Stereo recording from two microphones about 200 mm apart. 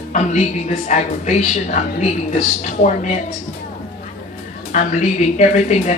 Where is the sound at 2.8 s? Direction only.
40° left (ahead or behind).